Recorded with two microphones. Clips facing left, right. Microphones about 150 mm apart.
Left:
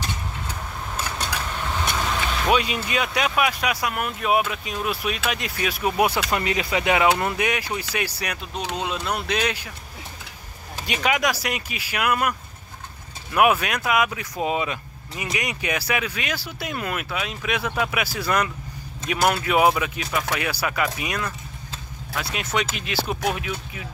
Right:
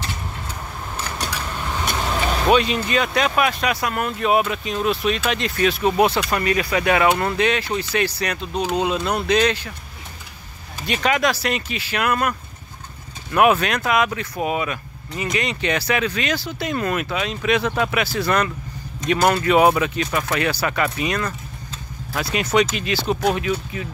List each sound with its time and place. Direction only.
2.5 s speech: 10° left (ahead or behind)
10.9 s speech: 10° left (ahead or behind)
14.4 s speech: 20° left (ahead or behind)
15.1 s speech: 10° left (ahead or behind)